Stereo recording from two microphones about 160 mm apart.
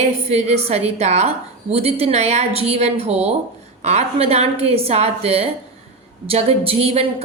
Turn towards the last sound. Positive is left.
turn(degrees=-40)  # may be behind; listen again after turning